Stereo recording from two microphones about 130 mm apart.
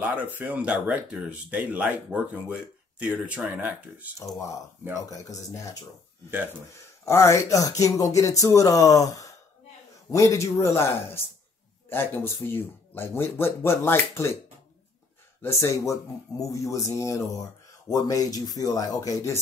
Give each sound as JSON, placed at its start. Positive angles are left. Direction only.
{"t": 0.0, "sound": "speech", "side_deg": -10}
{"t": 5.1, "sound": "speech", "side_deg": 25}
{"t": 7.1, "sound": "speech", "side_deg": 20}
{"t": 11.9, "sound": "speech", "side_deg": 15}
{"t": 15.4, "sound": "speech", "side_deg": 20}